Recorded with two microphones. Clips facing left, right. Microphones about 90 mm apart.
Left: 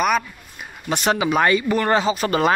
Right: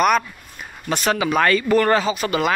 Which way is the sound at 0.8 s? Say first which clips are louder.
Even; 20° left (ahead or behind).